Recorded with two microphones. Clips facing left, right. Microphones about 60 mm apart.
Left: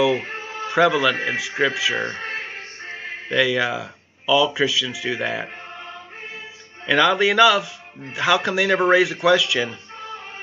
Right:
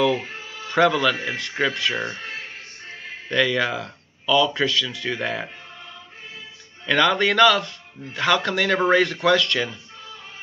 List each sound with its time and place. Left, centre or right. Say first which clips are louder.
0.1 s music: left 2 dB; left
0.7 s a man's voice: left 1 dB; centre
2.0 s music: left 3 dB; left
3.3 s speech: left 1 dB; centre
6.9 s speech: left 2 dB; centre
9.7 s music: left 5 dB; left